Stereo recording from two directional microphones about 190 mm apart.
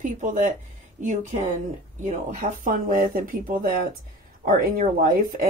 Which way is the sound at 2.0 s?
40° right (ahead or behind).